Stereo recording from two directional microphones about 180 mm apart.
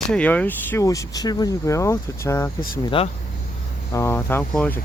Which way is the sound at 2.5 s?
55° left (ahead or behind).